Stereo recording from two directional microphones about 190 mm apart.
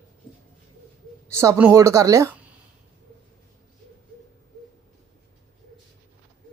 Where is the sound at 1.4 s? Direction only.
15° right (ahead or behind).